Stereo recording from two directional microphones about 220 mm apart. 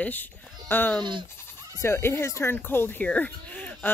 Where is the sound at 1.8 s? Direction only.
10° left (ahead or behind).